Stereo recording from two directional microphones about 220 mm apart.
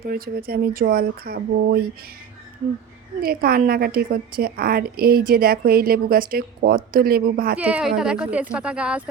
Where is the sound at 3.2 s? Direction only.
40° right (ahead or behind).